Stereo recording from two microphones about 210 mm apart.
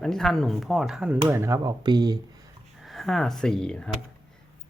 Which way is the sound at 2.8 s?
Centre (ahead or behind).